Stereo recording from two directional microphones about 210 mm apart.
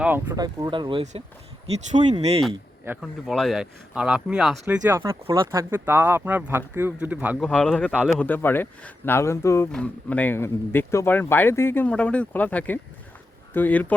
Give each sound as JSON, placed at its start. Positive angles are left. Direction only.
{"t": 0.0, "sound": "speech", "side_deg": -10}
{"t": 2.8, "sound": "speech", "side_deg": -5}
{"t": 7.4, "sound": "speech", "side_deg": 5}